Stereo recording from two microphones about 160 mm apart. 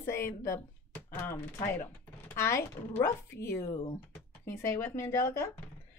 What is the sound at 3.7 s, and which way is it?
Speech, 30° left (ahead or behind).